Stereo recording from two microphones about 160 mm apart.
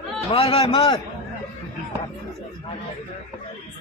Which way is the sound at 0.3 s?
35° left (ahead or behind).